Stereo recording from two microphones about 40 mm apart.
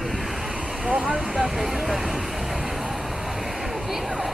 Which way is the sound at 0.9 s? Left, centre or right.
Centre.